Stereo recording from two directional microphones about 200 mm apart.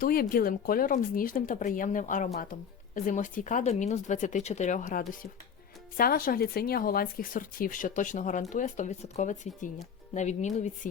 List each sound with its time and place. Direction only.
0.0 s speech: 45° left (ahead or behind)